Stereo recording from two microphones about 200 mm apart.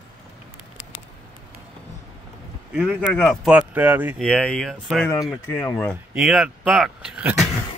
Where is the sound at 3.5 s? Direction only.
10° right (ahead or behind).